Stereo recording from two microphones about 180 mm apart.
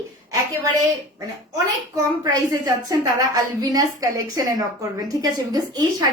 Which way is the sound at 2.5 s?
20° right (ahead or behind).